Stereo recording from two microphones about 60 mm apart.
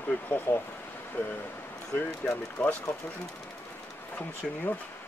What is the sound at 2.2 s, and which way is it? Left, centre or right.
Speech, centre.